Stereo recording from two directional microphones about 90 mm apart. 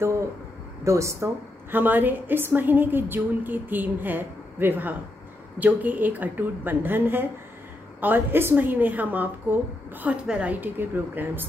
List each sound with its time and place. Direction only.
0.8 s a woman's voice: 35° right (ahead or behind)
1.8 s a woman's voice: 20° right (ahead or behind)